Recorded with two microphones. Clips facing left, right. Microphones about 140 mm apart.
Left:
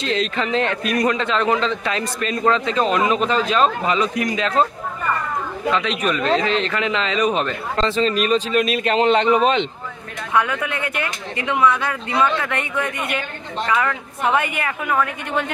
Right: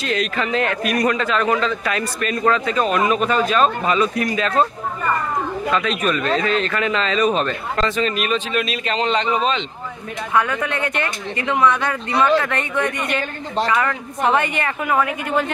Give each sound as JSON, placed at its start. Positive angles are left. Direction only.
{"t": 0.0, "sound": "a man's voice", "side_deg": 25}
{"t": 5.7, "sound": "a man's voice", "side_deg": 20}
{"t": 10.3, "sound": "a woman's voice", "side_deg": 10}
{"t": 14.9, "sound": "a woman's voice", "side_deg": -5}